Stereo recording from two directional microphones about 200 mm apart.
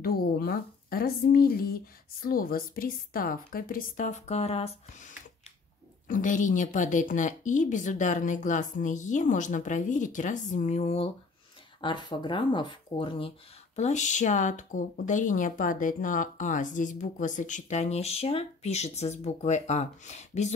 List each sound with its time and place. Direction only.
0.0 s a woman's voice: 50° left (ahead or behind); by 4.7 s 30° left (ahead or behind)
6.0 s speech: 40° left (ahead or behind)
11.8 s speech: 20° left (ahead or behind)